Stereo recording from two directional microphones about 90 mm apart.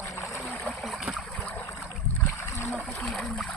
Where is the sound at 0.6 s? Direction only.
Centre (ahead or behind).